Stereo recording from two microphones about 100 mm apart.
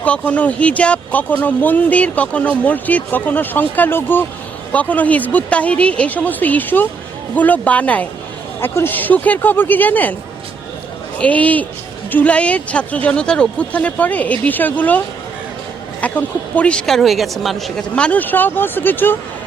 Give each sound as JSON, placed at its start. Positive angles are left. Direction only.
{"t": 0.0, "sound": "speech", "side_deg": 15}
{"t": 11.2, "sound": "speech", "side_deg": 15}
{"t": 17.9, "sound": "speech", "side_deg": 15}